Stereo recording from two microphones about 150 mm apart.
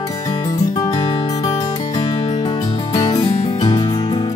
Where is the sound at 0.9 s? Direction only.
40° left (ahead or behind).